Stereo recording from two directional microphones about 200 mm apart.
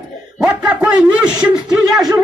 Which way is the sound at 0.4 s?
5° right (ahead or behind).